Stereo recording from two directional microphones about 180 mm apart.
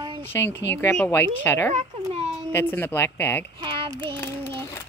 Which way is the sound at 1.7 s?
35° right (ahead or behind).